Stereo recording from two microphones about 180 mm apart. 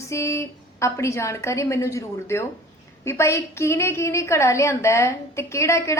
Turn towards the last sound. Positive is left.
turn(degrees=15)  # may be behind; listen again after turning